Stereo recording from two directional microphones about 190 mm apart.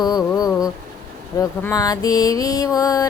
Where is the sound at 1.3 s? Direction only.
15° left (ahead or behind).